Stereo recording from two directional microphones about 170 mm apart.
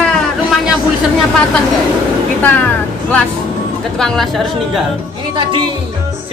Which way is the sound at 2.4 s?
10° left (ahead or behind).